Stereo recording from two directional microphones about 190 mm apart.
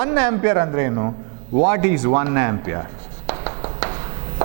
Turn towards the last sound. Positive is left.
turn(degrees=-25)  # may be behind; listen again after turning